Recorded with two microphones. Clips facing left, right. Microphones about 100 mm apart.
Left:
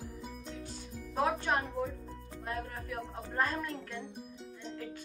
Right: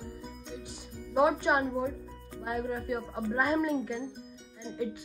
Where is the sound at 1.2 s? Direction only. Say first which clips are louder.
Right 6 dB; 15° right (ahead or behind).